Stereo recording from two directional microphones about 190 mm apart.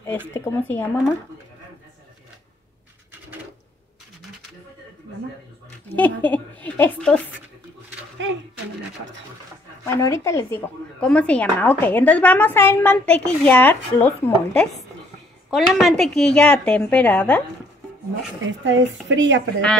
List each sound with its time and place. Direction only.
0.0 s a woman's voice: 10° left (ahead or behind)
5.9 s a woman's voice: 10° left (ahead or behind)
9.8 s a woman's voice: 15° left (ahead or behind)
18.4 s speech: 75° right (ahead or behind)